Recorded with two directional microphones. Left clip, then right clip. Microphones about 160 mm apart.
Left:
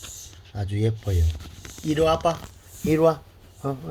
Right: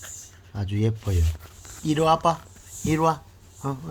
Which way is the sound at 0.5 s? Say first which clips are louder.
Left 1 dB; 10° right (ahead or behind).